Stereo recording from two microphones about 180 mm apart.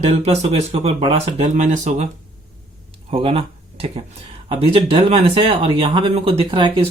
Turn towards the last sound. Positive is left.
turn(degrees=-30)  # may be behind; listen again after turning